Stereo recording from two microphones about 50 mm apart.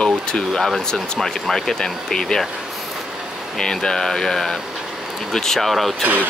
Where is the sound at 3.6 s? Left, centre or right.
Centre.